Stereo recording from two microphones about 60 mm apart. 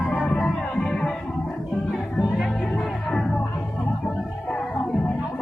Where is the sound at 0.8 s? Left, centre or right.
Centre.